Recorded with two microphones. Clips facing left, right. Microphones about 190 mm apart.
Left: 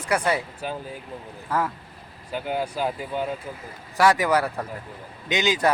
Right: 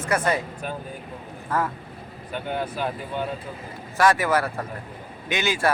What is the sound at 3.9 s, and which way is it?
Speech, 15° left (ahead or behind).